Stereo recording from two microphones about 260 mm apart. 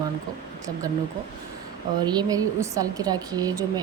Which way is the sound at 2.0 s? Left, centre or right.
Centre.